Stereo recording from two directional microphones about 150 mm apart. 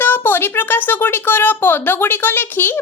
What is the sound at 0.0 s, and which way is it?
A woman's voice, 15° left (ahead or behind).